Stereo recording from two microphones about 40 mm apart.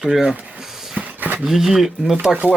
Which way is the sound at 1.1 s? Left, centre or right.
Right.